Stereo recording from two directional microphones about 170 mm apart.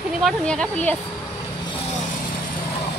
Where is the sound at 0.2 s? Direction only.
Centre (ahead or behind).